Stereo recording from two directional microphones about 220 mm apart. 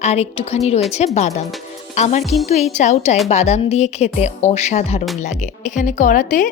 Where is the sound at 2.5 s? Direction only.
30° left (ahead or behind).